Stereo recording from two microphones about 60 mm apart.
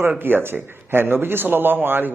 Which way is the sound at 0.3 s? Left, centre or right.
Right.